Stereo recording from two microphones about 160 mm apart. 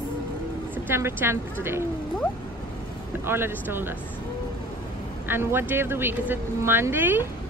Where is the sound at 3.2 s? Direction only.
15° right (ahead or behind).